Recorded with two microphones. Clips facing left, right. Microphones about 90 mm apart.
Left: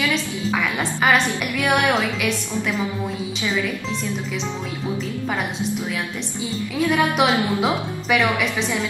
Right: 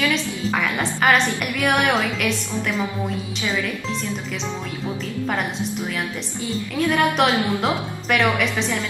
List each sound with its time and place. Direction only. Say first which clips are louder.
0.1 s a woman's voice: even; centre (ahead or behind)
6.8 s a woman's voice: even; centre (ahead or behind)